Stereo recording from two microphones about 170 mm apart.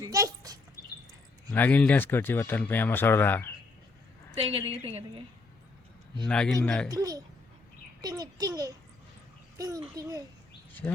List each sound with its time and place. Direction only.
0.0 s a sound: 20° right (ahead or behind)
1.5 s speech: 10° left (ahead or behind)
4.4 s a woman's voice: 35° right (ahead or behind)
6.2 s speech: 5° left (ahead or behind)
6.9 s a child's voice: 20° right (ahead or behind)
10.7 s speech: 10° left (ahead or behind)